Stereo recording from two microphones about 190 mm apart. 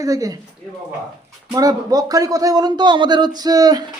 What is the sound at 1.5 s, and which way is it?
Speech, 20° right (ahead or behind).